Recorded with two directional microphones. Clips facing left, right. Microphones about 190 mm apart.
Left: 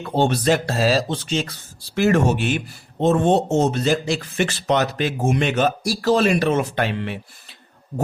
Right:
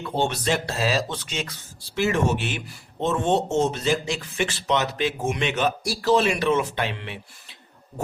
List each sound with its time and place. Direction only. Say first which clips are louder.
0.2 s speech: left 6 dB; 40° left (ahead or behind)
2.0 s speech: left 5 dB; 50° left (ahead or behind)